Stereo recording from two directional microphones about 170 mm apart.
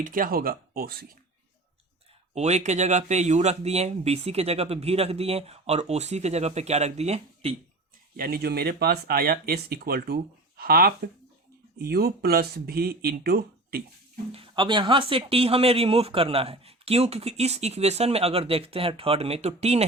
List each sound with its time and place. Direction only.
0.0 s speech: 55° right (ahead or behind)
2.3 s speech: 40° right (ahead or behind)
8.1 s speech: 60° right (ahead or behind)
14.3 s speech: 30° right (ahead or behind)